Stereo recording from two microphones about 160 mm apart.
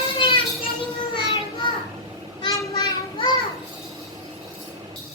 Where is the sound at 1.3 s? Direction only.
30° left (ahead or behind).